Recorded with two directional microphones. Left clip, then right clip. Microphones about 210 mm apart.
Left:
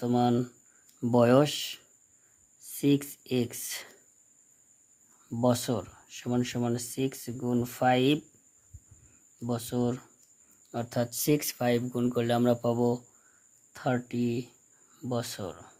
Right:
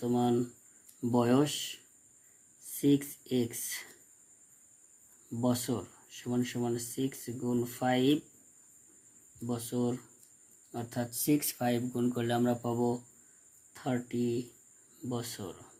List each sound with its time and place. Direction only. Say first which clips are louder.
0.0 s speech: left 3 dB; 45° left (ahead or behind)
5.4 s speech: left 5 dB; 45° left (ahead or behind)
9.5 s speech: left 3 dB; 45° left (ahead or behind)